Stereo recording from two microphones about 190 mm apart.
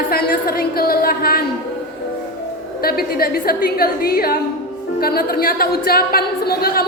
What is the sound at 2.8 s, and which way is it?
A woman's voice, 50° left (ahead or behind).